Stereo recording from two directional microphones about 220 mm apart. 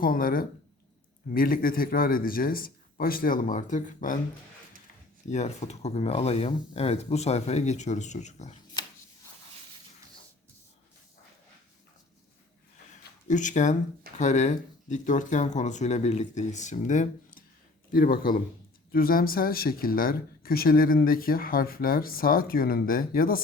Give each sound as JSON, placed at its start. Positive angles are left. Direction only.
{"t": 0.0, "sound": "speech", "side_deg": 40}
{"t": 5.3, "sound": "speech", "side_deg": 30}
{"t": 13.2, "sound": "speech", "side_deg": 35}